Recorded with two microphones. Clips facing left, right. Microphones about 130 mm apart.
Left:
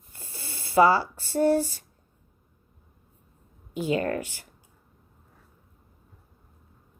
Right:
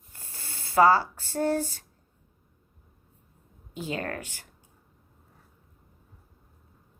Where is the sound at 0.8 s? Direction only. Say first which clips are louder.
Left 1 dB; 45° right (ahead or behind).